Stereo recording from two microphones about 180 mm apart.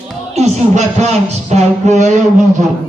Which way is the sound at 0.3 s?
40° right (ahead or behind).